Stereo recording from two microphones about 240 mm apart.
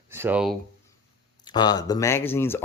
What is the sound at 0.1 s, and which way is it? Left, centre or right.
Speech, centre.